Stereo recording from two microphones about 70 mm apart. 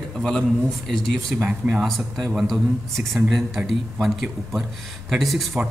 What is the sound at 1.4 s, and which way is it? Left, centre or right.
Speech, centre.